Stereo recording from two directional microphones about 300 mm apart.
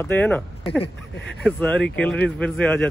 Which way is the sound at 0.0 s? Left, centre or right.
Centre.